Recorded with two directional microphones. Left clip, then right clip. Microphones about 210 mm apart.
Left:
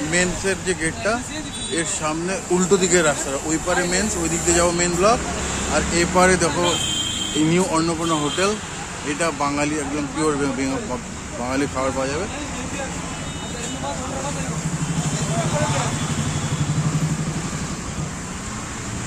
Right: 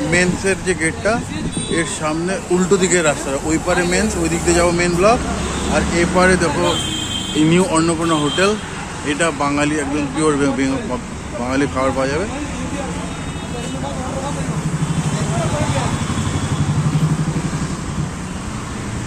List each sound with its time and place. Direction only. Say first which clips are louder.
0.1 s speech: right 4 dB; centre (ahead or behind)
5.9 s speech: right 2 dB; 15° left (ahead or behind)
7.4 s speech: right 5 dB; centre (ahead or behind)